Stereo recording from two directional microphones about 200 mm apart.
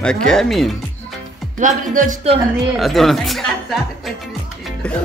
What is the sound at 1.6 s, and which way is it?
Speech, 40° right (ahead or behind).